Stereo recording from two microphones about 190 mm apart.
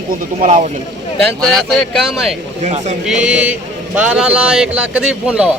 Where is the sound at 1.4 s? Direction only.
Centre (ahead or behind).